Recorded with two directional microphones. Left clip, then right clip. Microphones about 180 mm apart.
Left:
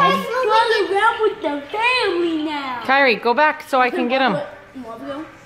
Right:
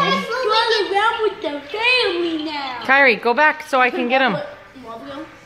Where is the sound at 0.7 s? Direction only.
35° left (ahead or behind).